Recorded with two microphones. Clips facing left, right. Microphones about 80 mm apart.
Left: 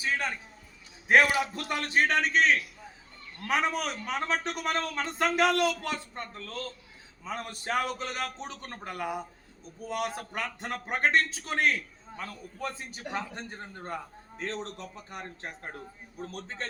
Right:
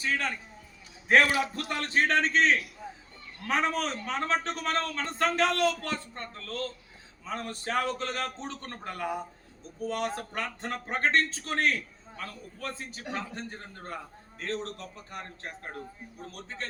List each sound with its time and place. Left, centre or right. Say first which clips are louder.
0.0 s a man's voice: even; centre; by 16.6 s left